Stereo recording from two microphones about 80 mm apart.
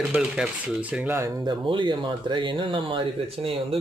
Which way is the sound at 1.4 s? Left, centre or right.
Right.